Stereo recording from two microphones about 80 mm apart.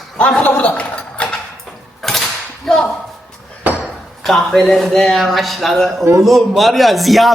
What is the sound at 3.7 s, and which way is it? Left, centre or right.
Ping, right.